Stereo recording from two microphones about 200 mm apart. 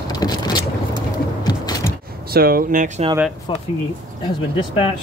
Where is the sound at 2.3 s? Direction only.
50° right (ahead or behind).